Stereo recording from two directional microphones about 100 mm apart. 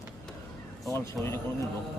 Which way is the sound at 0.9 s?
30° left (ahead or behind).